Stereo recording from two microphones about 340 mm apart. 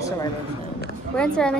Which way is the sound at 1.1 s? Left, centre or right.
Centre.